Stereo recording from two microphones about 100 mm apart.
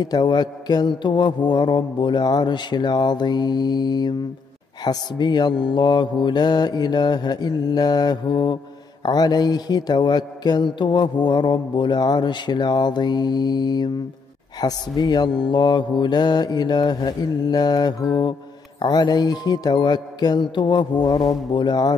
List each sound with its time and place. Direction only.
0.0 s a man's voice: 45° left (ahead or behind)